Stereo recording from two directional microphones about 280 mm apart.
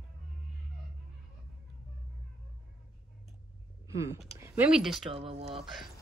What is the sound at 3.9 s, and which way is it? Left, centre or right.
Speech, centre.